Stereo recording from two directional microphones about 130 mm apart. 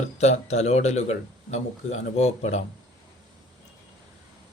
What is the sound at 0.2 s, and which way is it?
A man's voice, 60° left (ahead or behind).